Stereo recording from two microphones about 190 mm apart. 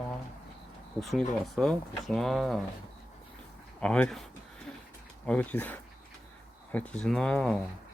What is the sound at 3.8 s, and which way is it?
Speech, 5° left (ahead or behind).